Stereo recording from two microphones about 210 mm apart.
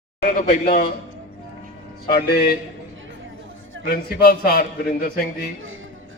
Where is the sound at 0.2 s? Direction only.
45° left (ahead or behind).